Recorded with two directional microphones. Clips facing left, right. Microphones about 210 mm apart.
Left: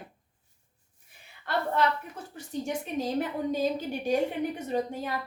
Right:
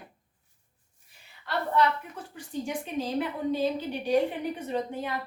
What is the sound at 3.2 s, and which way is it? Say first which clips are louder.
A woman's voice: right 2 dB; 45° left (ahead or behind).